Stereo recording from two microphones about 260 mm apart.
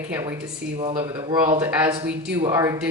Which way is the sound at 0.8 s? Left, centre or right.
Right.